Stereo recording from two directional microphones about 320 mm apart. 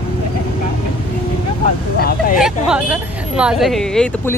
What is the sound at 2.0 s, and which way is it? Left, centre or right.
Speech, left.